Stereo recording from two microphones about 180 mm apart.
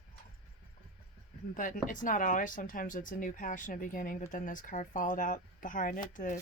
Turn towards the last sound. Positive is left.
turn(degrees=45)  # may be behind; listen again after turning